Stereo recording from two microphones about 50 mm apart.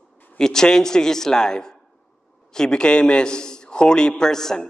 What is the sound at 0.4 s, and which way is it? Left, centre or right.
A man's voice, centre.